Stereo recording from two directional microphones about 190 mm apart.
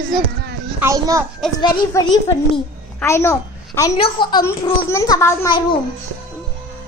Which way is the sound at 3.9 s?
25° left (ahead or behind).